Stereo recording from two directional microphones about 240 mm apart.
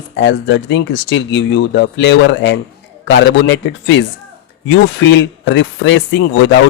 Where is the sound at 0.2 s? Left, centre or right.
Left.